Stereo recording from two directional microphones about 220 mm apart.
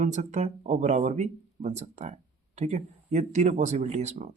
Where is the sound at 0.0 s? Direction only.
35° right (ahead or behind).